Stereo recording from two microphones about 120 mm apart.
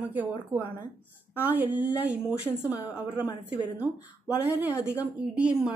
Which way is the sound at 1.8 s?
10° right (ahead or behind).